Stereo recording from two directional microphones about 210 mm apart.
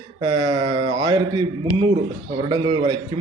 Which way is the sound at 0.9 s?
20° right (ahead or behind).